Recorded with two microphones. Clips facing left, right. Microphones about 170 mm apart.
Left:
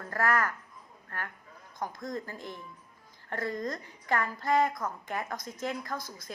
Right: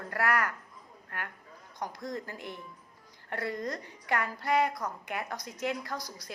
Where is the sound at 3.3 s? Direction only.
45° left (ahead or behind).